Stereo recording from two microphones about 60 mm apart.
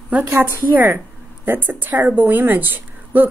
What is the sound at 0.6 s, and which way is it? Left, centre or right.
A woman's voice, right.